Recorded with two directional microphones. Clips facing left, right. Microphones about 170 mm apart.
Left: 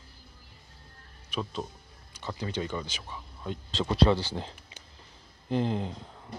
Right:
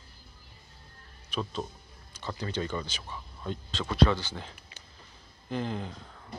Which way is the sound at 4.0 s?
30° left (ahead or behind).